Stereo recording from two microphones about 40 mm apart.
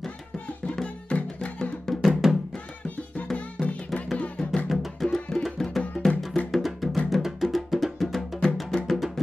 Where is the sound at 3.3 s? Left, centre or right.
Left.